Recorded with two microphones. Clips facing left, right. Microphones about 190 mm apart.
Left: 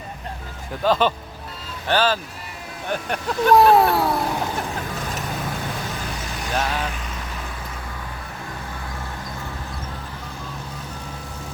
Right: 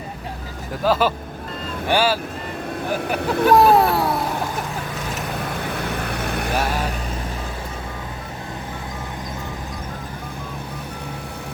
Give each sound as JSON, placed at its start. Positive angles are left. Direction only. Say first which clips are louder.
{"t": 0.9, "sound": "speech", "louder": "even", "side_deg": -5}
{"t": 3.2, "sound": "speech", "louder": "right 4 dB", "side_deg": -60}
{"t": 3.4, "sound": "speech", "louder": "even", "side_deg": 0}
{"t": 6.0, "sound": "vehicle", "louder": "right 6 dB", "side_deg": -60}